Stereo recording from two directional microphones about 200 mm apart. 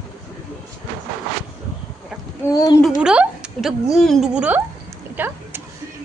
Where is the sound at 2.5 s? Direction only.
20° left (ahead or behind).